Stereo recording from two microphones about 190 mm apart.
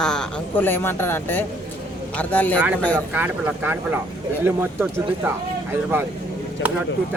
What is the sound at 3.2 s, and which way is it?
Speech, 10° right (ahead or behind).